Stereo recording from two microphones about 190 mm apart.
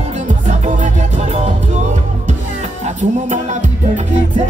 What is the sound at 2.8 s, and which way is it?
Music, 40° right (ahead or behind).